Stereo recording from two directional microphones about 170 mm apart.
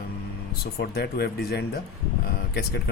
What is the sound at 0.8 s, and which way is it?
A man's voice, 70° left (ahead or behind).